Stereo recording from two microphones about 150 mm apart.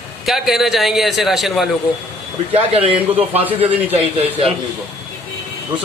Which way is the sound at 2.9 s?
10° right (ahead or behind).